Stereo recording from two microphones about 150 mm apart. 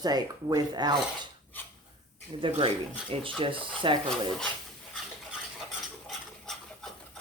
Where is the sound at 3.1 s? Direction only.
35° right (ahead or behind).